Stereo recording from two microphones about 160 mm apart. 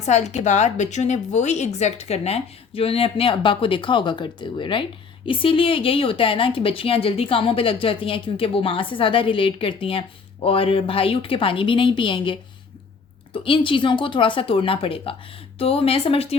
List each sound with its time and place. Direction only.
0.0 s a woman's voice: 45° left (ahead or behind)